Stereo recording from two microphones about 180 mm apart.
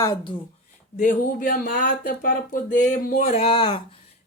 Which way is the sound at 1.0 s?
50° left (ahead or behind).